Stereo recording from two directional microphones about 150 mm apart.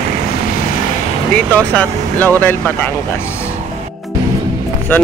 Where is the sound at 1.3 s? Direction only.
10° left (ahead or behind).